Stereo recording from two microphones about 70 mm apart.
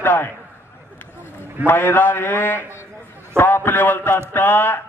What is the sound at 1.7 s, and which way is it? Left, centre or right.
A man's voice, left.